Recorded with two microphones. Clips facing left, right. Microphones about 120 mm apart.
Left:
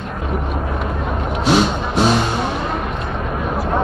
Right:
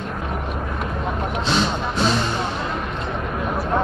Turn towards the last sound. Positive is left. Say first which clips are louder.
# left 4 dB
turn(degrees=70)  # may be behind; listen again after turning